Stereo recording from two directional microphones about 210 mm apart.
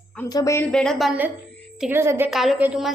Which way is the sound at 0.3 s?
15° left (ahead or behind).